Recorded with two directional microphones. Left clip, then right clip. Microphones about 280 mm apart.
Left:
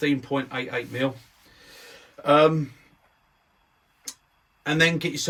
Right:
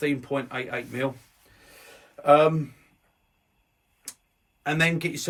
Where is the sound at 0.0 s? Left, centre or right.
Centre.